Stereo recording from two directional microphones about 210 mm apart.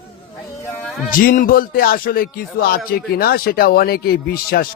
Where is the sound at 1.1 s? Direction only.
40° left (ahead or behind).